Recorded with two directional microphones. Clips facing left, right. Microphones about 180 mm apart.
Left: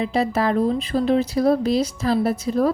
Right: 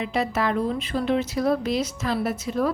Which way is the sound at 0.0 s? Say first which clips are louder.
Left 4 dB; 35° left (ahead or behind).